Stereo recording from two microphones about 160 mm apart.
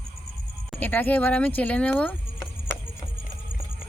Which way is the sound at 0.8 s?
10° left (ahead or behind).